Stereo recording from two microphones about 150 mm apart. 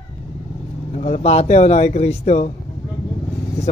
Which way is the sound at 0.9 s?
50° left (ahead or behind).